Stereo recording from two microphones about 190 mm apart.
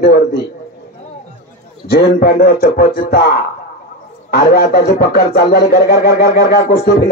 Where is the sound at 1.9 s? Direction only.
55° left (ahead or behind).